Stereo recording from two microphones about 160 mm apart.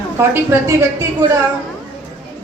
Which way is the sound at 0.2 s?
15° right (ahead or behind).